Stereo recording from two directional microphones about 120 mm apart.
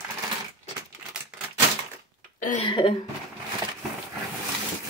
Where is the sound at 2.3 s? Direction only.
90° left.